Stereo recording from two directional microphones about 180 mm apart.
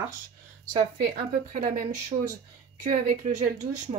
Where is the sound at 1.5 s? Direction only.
50° right (ahead or behind).